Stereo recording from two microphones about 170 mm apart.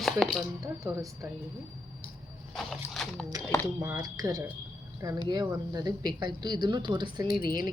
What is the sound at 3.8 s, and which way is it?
A woman's voice, 15° right (ahead or behind).